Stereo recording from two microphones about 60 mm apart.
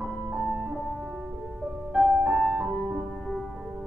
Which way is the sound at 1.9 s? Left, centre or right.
Centre.